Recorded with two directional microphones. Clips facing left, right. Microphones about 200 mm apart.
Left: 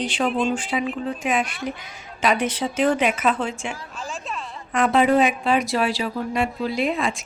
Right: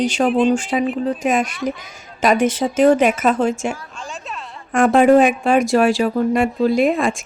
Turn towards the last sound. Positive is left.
turn(degrees=-50)  # may be behind; listen again after turning